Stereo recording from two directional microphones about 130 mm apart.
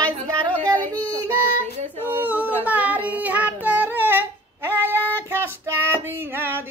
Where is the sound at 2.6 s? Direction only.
15° right (ahead or behind).